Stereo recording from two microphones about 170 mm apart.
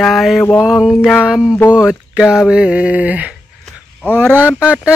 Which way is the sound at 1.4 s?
20° left (ahead or behind).